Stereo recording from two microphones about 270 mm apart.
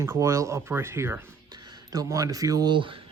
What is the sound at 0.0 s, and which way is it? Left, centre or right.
Speech, centre.